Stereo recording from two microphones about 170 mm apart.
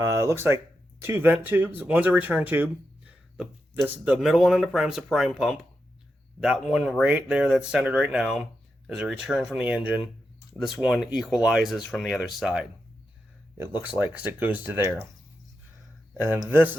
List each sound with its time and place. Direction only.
0.0 s speech: 20° right (ahead or behind); by 12.6 s centre (ahead or behind)
13.6 s speech: 10° right (ahead or behind)
16.1 s speech: 15° right (ahead or behind)